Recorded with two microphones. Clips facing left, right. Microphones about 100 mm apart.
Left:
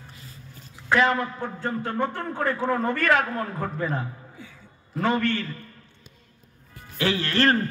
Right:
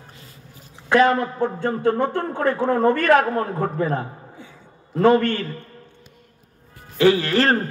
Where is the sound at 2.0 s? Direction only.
30° right (ahead or behind).